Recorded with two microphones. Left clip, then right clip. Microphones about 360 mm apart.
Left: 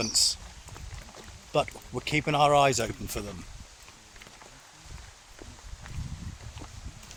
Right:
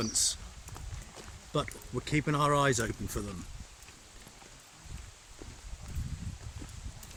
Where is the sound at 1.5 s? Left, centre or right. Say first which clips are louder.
Left 6 dB; centre.